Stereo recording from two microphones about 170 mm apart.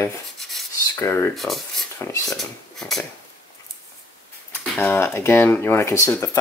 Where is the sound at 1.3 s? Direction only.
Centre (ahead or behind).